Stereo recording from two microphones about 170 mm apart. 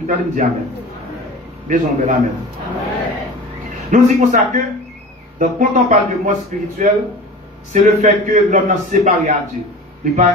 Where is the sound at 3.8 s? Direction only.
45° right (ahead or behind).